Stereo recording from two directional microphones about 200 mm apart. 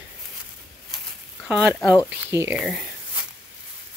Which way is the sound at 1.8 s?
15° left (ahead or behind).